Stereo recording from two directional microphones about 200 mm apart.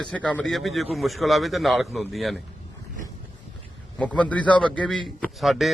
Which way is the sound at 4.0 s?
5° left (ahead or behind).